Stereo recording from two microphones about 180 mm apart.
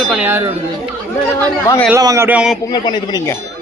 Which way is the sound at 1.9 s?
15° right (ahead or behind).